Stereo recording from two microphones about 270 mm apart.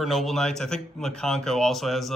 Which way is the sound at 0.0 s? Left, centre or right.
Centre.